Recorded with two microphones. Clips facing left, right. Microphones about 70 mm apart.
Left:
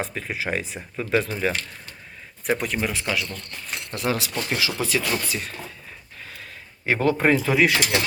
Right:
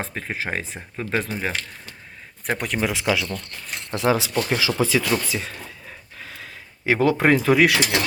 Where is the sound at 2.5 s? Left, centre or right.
Right.